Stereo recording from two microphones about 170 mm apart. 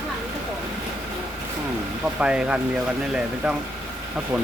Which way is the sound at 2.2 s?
5° right (ahead or behind).